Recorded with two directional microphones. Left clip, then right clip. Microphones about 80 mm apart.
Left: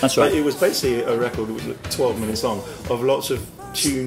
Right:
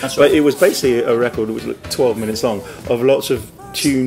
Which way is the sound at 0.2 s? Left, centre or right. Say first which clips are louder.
Right 9 dB; right.